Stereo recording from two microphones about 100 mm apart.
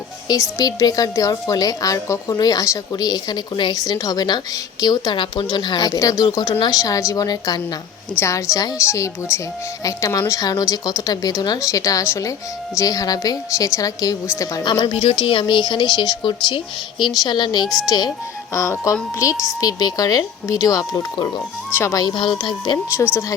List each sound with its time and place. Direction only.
0.3 s a woman's voice: 45° left (ahead or behind)
8.2 s a woman's voice: 30° left (ahead or behind)
14.6 s a woman's voice: 45° left (ahead or behind)
15.2 s a woman's voice: 55° left (ahead or behind)
18.5 s speech: 30° left (ahead or behind)
21.7 s a woman's voice: 20° left (ahead or behind)
21.9 s a woman's voice: 50° left (ahead or behind)